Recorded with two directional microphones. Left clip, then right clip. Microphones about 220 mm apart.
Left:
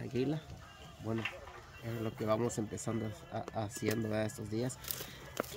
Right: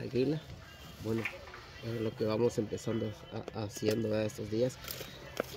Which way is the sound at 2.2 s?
10° left (ahead or behind).